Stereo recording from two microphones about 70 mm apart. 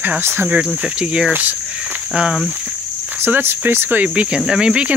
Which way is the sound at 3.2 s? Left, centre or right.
Right.